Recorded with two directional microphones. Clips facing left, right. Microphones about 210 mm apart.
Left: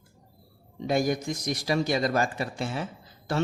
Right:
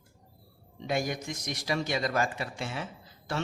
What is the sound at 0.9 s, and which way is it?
A man's voice, 40° left (ahead or behind).